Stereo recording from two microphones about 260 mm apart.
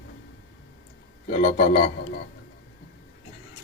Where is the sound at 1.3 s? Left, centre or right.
Left.